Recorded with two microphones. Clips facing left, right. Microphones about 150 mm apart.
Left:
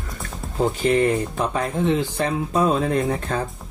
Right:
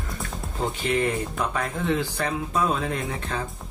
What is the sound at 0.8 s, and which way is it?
Speech, 35° left (ahead or behind).